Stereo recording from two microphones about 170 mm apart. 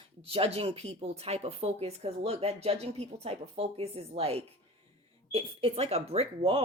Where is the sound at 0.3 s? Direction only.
35° right (ahead or behind).